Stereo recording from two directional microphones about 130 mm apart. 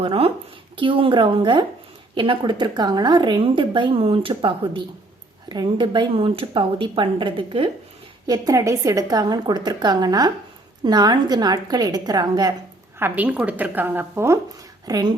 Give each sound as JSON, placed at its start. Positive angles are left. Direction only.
{"t": 0.0, "sound": "a woman's voice", "side_deg": -45}
{"t": 8.3, "sound": "a woman's voice", "side_deg": -25}
{"t": 13.0, "sound": "a woman's voice", "side_deg": -15}
{"t": 14.8, "sound": "speech", "side_deg": -30}